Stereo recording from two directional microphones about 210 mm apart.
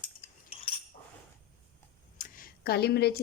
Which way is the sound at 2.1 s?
40° left (ahead or behind).